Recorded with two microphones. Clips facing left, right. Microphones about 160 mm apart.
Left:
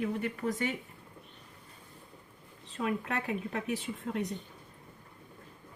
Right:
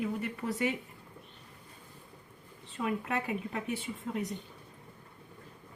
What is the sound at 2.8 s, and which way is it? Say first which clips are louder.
Speech: even; centre (ahead or behind).